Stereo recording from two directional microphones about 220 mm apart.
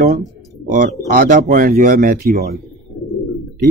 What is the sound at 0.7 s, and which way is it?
Speech, 35° right (ahead or behind).